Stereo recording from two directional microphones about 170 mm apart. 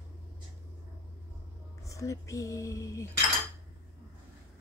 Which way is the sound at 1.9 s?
20° left (ahead or behind).